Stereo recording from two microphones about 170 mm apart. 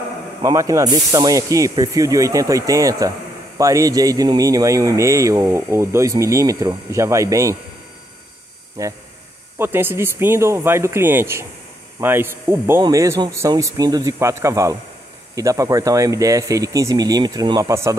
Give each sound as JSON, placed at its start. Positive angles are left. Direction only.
{"t": 0.4, "sound": "speech", "side_deg": -20}
{"t": 8.8, "sound": "speech", "side_deg": -20}